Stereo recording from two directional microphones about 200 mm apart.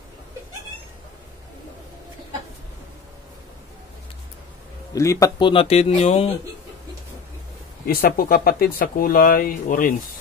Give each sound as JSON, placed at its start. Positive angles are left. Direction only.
{"t": 4.9, "sound": "a man's voice", "side_deg": 15}
{"t": 5.5, "sound": "speech", "side_deg": 30}
{"t": 7.8, "sound": "speech", "side_deg": 50}